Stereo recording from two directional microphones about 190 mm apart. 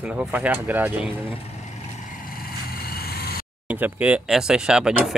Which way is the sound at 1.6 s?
45° left (ahead or behind).